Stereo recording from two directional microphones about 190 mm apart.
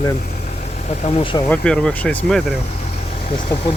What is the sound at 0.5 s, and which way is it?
Vehicle, 35° left (ahead or behind).